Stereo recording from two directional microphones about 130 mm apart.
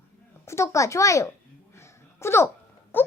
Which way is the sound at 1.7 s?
20° left (ahead or behind).